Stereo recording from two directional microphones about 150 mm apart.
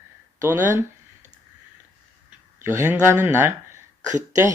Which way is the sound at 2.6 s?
15° right (ahead or behind).